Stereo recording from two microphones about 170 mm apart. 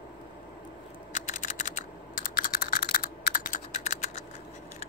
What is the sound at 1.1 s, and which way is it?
Typing, 50° left (ahead or behind).